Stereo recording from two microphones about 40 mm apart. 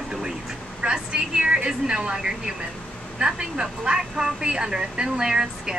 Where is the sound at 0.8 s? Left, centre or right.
Right.